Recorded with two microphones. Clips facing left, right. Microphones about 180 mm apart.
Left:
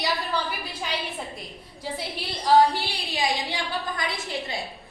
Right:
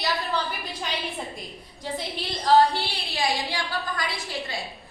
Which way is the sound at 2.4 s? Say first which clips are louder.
Even; 15° left (ahead or behind).